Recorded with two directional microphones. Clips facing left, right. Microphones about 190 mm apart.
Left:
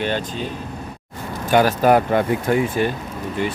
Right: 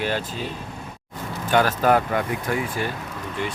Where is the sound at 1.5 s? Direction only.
15° left (ahead or behind).